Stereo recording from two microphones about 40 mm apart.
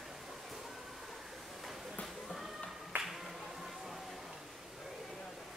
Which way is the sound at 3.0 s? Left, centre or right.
Centre.